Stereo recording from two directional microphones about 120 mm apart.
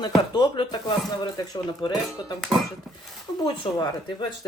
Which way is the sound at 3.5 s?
40° left (ahead or behind).